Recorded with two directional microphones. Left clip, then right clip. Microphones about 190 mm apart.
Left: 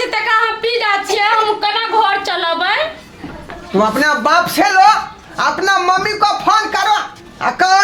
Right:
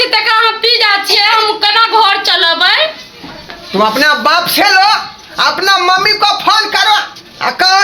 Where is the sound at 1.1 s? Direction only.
15° left (ahead or behind).